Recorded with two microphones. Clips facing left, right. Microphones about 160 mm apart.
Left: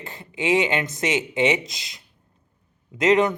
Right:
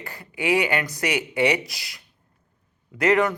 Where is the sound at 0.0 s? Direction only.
20° left (ahead or behind).